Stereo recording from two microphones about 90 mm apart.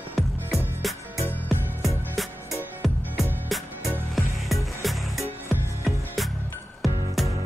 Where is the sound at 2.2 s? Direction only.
Centre (ahead or behind).